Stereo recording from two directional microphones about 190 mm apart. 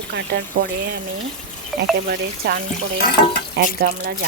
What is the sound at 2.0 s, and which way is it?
Speech, 55° right (ahead or behind).